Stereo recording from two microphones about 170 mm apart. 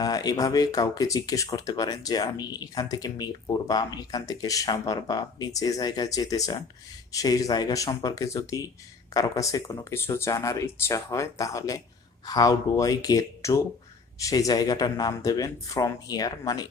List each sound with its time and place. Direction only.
0.0 s speech: 20° left (ahead or behind)